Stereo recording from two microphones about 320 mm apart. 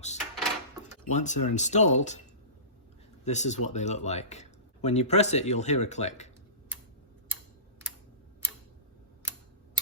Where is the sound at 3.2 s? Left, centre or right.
Left.